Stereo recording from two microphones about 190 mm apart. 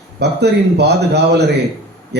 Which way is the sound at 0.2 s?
60° right (ahead or behind).